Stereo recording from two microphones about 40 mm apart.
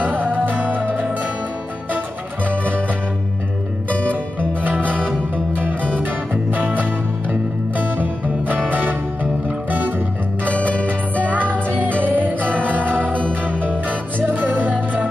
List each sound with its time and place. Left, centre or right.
0.0 s music: right
4.1 s music: right
10.4 s music: left
10.9 s music: right